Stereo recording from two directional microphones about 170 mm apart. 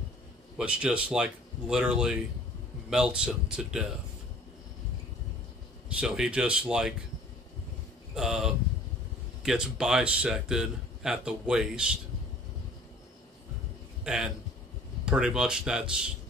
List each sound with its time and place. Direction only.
0.6 s a man's voice: 5° right (ahead or behind)
5.9 s a man's voice: 5° right (ahead or behind)
8.1 s a man's voice: centre (ahead or behind)
14.0 s a man's voice: 5° right (ahead or behind)